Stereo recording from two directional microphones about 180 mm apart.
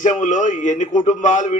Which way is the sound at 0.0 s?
45° left (ahead or behind).